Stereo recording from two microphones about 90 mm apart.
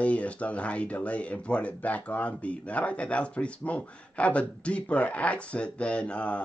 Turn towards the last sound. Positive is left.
turn(degrees=15)  # may be behind; listen again after turning